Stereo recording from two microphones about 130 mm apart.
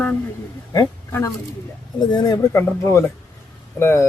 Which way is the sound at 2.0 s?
30° left (ahead or behind).